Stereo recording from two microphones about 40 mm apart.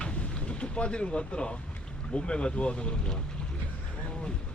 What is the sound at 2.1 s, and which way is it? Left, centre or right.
Speech, left.